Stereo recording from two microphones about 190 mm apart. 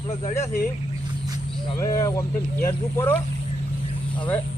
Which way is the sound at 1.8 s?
20° left (ahead or behind).